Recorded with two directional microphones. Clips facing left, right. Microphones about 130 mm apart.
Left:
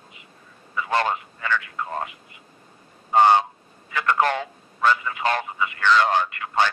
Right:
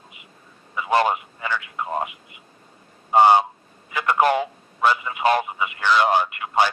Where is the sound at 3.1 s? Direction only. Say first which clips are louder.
Right 2 dB; 15° right (ahead or behind).